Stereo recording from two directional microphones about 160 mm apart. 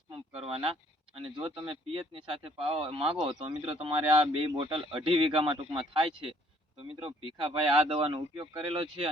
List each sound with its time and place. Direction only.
0.3 s speech: 35° right (ahead or behind)